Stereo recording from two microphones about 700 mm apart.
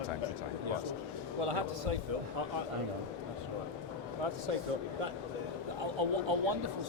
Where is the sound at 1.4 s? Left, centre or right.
Right.